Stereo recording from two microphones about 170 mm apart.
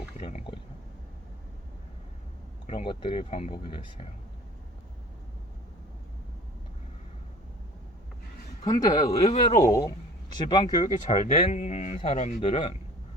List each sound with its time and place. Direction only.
0.2 s a sound: 40° left (ahead or behind)
2.6 s speech: 35° left (ahead or behind)
8.6 s speech: 20° left (ahead or behind)
9.1 s speech: 35° left (ahead or behind)
10.3 s speech: 25° left (ahead or behind)
10.8 s speech: 40° left (ahead or behind)